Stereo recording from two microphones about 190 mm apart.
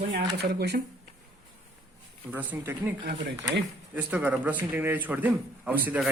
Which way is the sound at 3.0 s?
60° right (ahead or behind).